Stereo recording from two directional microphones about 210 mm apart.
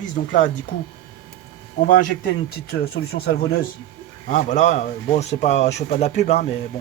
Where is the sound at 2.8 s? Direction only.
50° left (ahead or behind).